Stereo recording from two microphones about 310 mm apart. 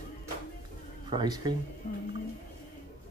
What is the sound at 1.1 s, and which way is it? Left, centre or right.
Speech, centre.